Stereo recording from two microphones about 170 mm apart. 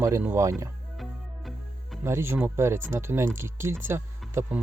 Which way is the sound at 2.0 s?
15° right (ahead or behind).